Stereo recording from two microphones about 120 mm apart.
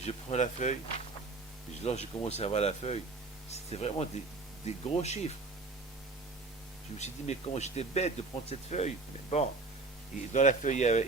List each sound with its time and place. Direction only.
0.0 s speech: 65° left (ahead or behind); by 0.8 s 85° left
1.8 s speech: 65° left (ahead or behind)
7.0 s speech: 65° left (ahead or behind)
10.3 s speech: 90° left